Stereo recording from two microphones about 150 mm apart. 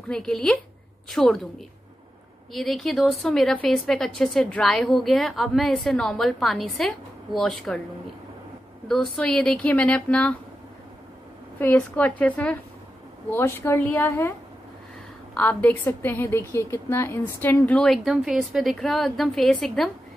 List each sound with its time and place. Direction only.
0.1 s a woman's voice: 5° left (ahead or behind)
2.5 s a woman's voice: centre (ahead or behind)
8.8 s speech: centre (ahead or behind)
11.6 s speech: 10° left (ahead or behind)
15.3 s a woman's voice: 10° left (ahead or behind)